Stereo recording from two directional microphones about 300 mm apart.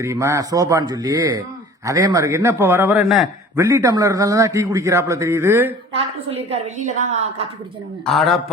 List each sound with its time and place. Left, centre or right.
0.0 s a man's voice: centre
6.0 s a woman's voice: centre
8.0 s a man's voice: centre